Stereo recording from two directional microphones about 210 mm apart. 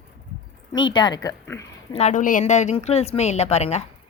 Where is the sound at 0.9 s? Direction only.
20° left (ahead or behind).